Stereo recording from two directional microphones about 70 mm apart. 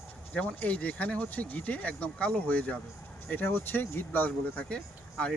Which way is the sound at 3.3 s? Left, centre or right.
Left.